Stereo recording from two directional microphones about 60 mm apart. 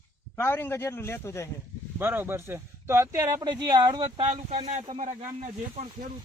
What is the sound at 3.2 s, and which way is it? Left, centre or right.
Speech, right.